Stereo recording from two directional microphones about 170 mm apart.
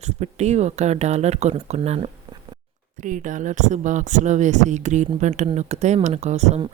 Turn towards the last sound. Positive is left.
turn(degrees=-40)  # may be behind; listen again after turning